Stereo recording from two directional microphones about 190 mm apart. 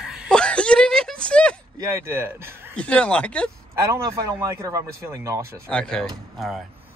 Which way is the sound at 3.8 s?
15° right (ahead or behind).